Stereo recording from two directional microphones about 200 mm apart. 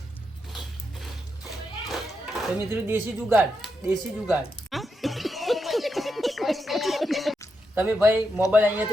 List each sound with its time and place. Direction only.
1.0 s a sound: centre (ahead or behind)
2.6 s speech: 10° right (ahead or behind)
4.7 s a sound: centre (ahead or behind)
7.8 s speech: 10° right (ahead or behind)
8.1 s speech: 15° left (ahead or behind)
8.5 s speech: 10° right (ahead or behind)